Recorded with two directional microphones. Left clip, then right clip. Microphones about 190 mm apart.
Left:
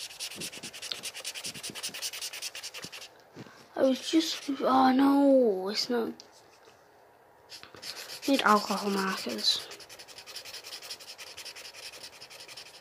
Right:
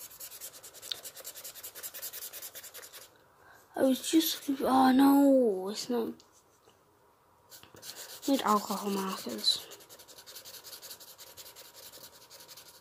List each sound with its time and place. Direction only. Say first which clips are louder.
0.9 s a sound: even; 35° right (ahead or behind)
3.7 s speech: left 1 dB; 35° right (ahead or behind)
5.4 s speech: left 3 dB; 10° right (ahead or behind)
8.3 s speech: left 4 dB; 10° right (ahead or behind)
8.8 s speech: left 4 dB; 15° left (ahead or behind)
9.3 s speech: right 1 dB; 10° right (ahead or behind)